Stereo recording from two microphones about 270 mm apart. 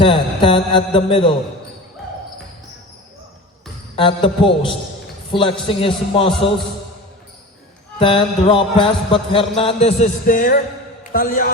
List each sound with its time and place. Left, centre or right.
0.0 s music: centre
3.9 s music: centre
7.9 s music: centre
11.1 s a man's voice: left